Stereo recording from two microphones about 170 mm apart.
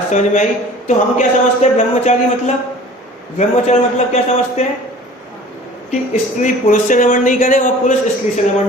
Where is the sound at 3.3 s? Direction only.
40° left (ahead or behind).